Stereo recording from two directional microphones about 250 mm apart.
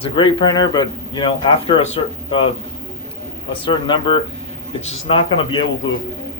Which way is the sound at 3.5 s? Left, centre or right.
Centre.